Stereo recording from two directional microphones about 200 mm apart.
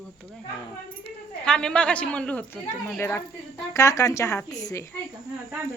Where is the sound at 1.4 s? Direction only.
5° left (ahead or behind).